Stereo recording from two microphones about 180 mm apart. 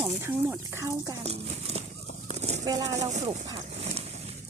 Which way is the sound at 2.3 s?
35° right (ahead or behind).